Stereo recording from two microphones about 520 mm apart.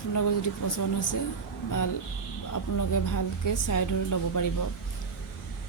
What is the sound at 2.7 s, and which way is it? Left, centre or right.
A woman's voice, left.